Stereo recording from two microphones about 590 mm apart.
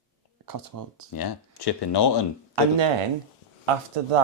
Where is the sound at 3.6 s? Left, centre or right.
Right.